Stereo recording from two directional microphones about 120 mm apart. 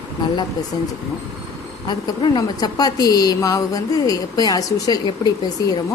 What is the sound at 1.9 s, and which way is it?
A woman's voice, 35° left (ahead or behind).